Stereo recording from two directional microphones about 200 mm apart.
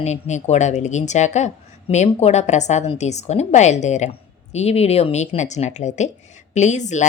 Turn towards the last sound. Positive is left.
turn(degrees=35)  # may be behind; listen again after turning